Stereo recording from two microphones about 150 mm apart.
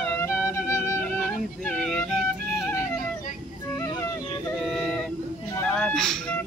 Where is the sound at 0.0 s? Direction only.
15° left (ahead or behind).